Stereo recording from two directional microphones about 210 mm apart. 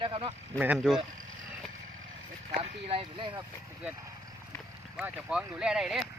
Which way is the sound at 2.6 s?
25° right (ahead or behind).